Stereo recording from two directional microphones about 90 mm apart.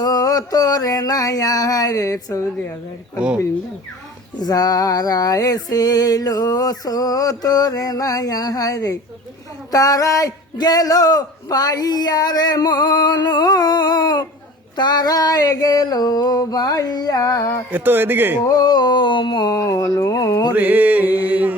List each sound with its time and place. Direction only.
0.0 s female singing: 45° left (ahead or behind)
3.2 s speech: 10° right (ahead or behind)
4.4 s female singing: 45° left (ahead or behind)
17.7 s mantra: 20° right (ahead or behind)
18.4 s a sound: 45° left (ahead or behind); by 19.5 s 65° left (ahead or behind)
19.5 s speech: 35° left (ahead or behind)
20.5 s mantra: 20° right (ahead or behind)